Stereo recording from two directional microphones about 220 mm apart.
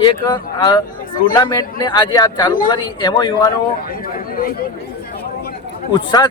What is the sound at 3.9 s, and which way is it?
Speech, 40° left (ahead or behind).